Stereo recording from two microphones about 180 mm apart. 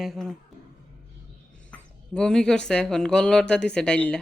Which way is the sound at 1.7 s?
5° left (ahead or behind).